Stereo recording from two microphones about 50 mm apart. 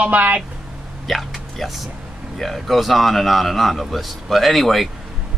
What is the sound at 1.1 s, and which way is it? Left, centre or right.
A man's voice, centre.